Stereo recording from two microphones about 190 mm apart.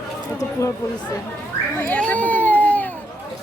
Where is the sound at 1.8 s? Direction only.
5° left (ahead or behind).